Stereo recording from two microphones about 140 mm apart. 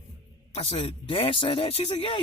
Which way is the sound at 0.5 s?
45° left (ahead or behind).